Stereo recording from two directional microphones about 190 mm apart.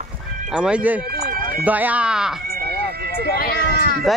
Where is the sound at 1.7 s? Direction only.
10° right (ahead or behind).